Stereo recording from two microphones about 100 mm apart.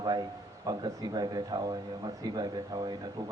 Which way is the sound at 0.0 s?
45° right (ahead or behind).